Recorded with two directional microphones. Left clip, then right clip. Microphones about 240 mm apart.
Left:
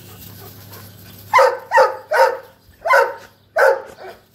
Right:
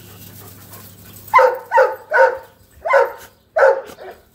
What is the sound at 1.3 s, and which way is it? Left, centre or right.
Dog, left.